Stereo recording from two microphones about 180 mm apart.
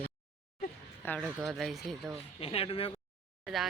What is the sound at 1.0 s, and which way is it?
Speech, 10° left (ahead or behind).